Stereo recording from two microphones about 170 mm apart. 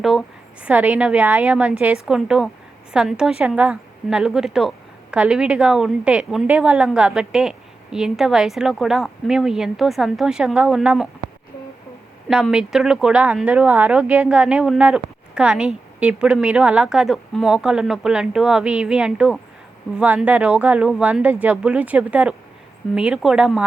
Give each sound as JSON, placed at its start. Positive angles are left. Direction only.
{"t": 0.0, "sound": "a woman's voice", "side_deg": 0}
{"t": 12.3, "sound": "a woman's voice", "side_deg": -5}